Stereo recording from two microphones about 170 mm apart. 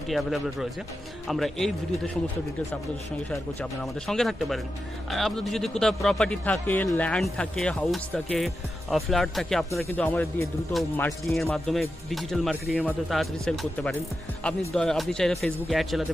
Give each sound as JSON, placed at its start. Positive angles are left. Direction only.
{"t": 0.1, "sound": "speech", "side_deg": 0}
{"t": 4.1, "sound": "speech", "side_deg": 0}